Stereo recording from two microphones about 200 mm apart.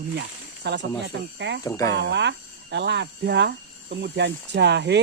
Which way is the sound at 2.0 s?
60° right (ahead or behind).